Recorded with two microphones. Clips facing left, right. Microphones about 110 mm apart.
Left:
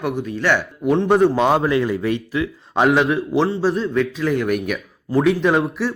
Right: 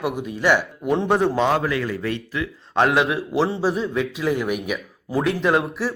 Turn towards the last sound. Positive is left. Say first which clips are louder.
# left 2 dB
turn(degrees=0)  # may be behind; listen again after turning